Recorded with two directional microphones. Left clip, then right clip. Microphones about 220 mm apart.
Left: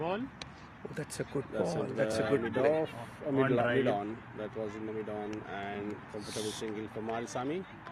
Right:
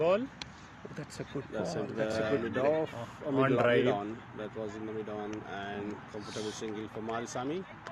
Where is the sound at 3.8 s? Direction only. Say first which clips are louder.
Right 1 dB; centre (ahead or behind).